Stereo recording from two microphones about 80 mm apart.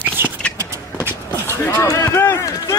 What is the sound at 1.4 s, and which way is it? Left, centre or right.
Run, left.